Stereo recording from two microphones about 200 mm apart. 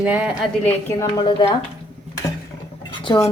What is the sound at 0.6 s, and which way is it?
Speech, 15° left (ahead or behind).